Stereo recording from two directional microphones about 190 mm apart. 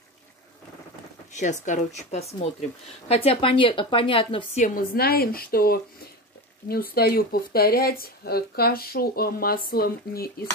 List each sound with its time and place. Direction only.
1.3 s a woman's voice: 40° left (ahead or behind)
4.6 s speech: 50° left (ahead or behind)